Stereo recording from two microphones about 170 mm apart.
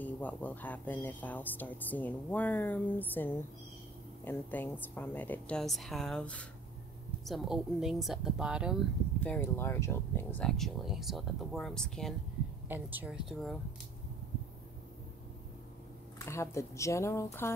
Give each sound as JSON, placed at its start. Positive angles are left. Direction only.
{"t": 0.0, "sound": "speech", "side_deg": 10}
{"t": 9.2, "sound": "speech", "side_deg": 10}
{"t": 12.6, "sound": "speech", "side_deg": -10}
{"t": 16.3, "sound": "speech", "side_deg": 15}